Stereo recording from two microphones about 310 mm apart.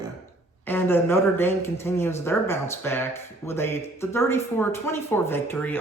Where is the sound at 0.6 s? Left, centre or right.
Centre.